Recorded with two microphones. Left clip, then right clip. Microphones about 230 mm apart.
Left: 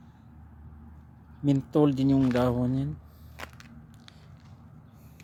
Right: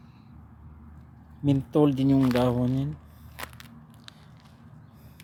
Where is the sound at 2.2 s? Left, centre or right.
Centre.